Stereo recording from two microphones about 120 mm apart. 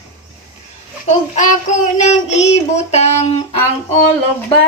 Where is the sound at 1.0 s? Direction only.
80° left; by 3.3 s 65° left (ahead or behind).